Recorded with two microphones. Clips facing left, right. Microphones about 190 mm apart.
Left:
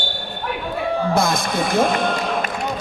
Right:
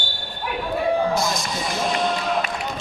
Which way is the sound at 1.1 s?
55° left (ahead or behind).